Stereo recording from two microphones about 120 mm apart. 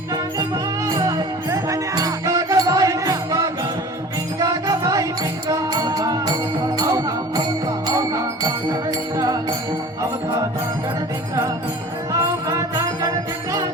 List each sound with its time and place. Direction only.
0.9 s music: 25° right (ahead or behind)
12.5 s music: 30° right (ahead or behind)